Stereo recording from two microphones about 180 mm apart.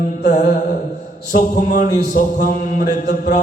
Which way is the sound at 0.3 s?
45° left (ahead or behind).